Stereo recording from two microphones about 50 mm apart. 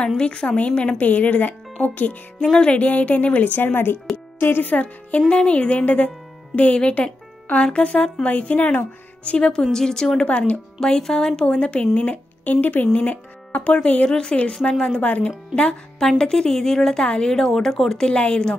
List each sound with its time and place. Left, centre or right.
0.2 s a woman's voice: centre
10.2 s speech: left
10.8 s a woman's voice: centre
16.0 s a woman's voice: centre